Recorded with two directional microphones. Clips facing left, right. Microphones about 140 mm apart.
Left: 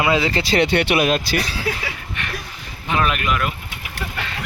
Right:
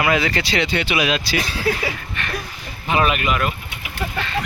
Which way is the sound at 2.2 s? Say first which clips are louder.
Right 1 dB; 15° left (ahead or behind).